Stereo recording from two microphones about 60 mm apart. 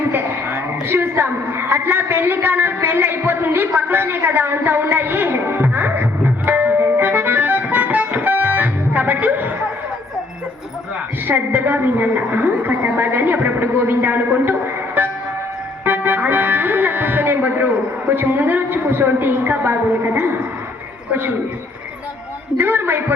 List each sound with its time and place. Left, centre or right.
0.0 s a sound: right
11.3 s a woman's voice: right
15.0 s music: right
18.1 s a woman's voice: right
21.1 s a woman's voice: right
22.5 s a woman's voice: right